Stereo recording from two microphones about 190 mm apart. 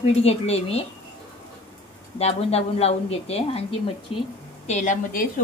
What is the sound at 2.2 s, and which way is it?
A woman's voice, 30° left (ahead or behind).